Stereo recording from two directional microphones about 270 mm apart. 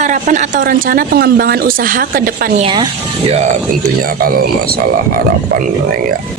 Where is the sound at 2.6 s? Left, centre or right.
Centre.